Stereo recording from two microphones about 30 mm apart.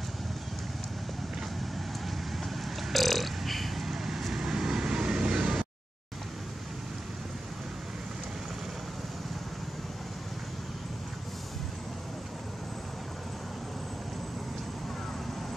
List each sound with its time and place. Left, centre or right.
2.5 s burping: centre
3.8 s vehicle: centre; by 5.7 s right